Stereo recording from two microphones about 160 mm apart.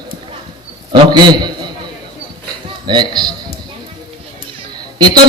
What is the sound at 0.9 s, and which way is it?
Speech, 25° right (ahead or behind).